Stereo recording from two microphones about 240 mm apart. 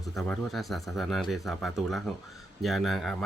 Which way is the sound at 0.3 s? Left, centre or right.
Centre.